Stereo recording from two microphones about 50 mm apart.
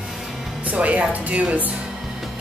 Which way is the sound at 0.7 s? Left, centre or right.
Right.